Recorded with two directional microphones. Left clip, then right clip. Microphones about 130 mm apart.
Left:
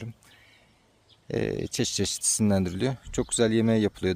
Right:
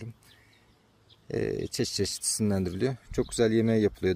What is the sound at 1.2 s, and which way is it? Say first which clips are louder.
Speech: left 1 dB; 45° left (ahead or behind).